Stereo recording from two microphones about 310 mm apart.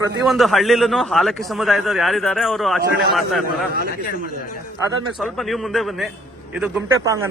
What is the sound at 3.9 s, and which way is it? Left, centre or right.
Speech, left.